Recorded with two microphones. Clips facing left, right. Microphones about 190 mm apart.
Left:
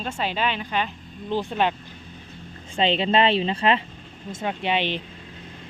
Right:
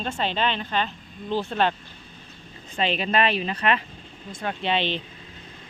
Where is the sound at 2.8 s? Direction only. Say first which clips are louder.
Left 3 dB; 25° left (ahead or behind).